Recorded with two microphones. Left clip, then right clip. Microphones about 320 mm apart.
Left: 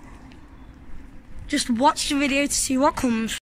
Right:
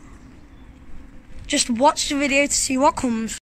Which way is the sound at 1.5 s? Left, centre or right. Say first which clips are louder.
Right 2 dB; centre.